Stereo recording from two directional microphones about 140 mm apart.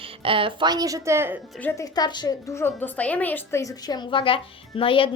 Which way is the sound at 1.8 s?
30° left (ahead or behind).